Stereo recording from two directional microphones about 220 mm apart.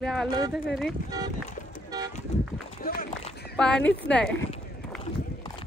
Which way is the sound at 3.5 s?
5° left (ahead or behind).